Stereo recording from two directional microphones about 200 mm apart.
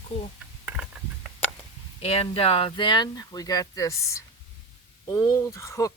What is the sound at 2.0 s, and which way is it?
Speech, 30° left (ahead or behind).